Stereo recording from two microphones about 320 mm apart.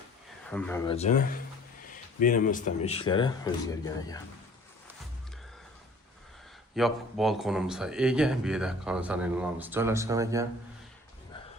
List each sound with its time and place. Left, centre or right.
0.5 s a man's voice: centre
0.9 s speech: left
6.7 s a man's voice: centre